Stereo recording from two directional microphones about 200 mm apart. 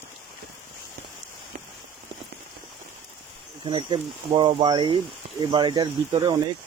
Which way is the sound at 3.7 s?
25° right (ahead or behind).